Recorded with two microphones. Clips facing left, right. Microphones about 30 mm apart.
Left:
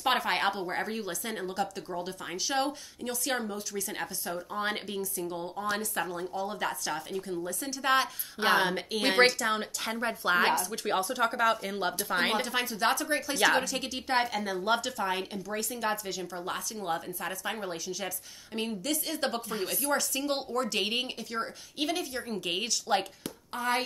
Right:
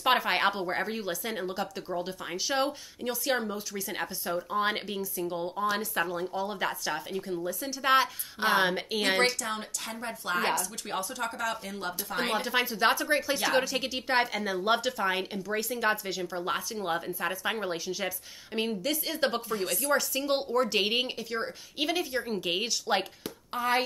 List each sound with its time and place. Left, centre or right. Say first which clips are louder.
0.0 s a woman's voice: right 2 dB; centre
9.4 s speech: left 4 dB; left
12.4 s a woman's voice: right 2 dB; centre
19.6 s a woman's voice: right 2 dB; centre